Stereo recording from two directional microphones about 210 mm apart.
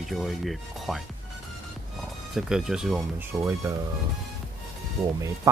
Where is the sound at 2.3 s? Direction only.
5° right (ahead or behind).